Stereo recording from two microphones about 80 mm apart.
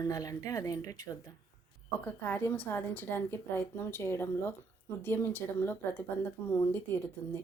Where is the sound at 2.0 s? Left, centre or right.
Left.